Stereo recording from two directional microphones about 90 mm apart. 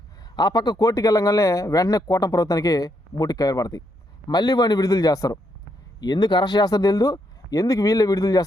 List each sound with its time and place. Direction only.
0.3 s speech: 50° left (ahead or behind)